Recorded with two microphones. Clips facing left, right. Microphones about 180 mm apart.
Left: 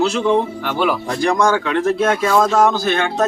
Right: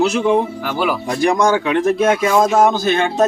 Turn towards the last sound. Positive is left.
turn(degrees=-20)  # may be behind; listen again after turning